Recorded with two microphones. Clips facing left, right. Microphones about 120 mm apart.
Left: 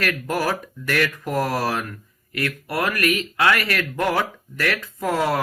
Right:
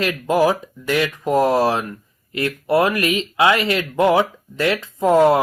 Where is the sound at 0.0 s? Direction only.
20° right (ahead or behind).